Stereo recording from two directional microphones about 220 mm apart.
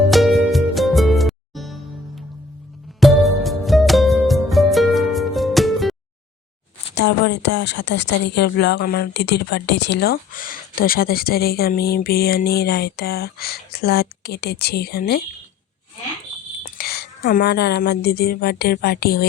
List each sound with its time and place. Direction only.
0.0 s music: centre (ahead or behind)
3.0 s music: centre (ahead or behind)
6.9 s speech: 50° left (ahead or behind)
16.7 s a woman's voice: 45° left (ahead or behind)